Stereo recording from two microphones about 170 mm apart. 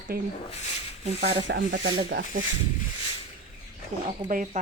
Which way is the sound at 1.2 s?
90° right.